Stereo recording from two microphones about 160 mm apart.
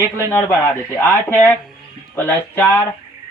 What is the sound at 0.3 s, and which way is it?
Speech, 15° left (ahead or behind).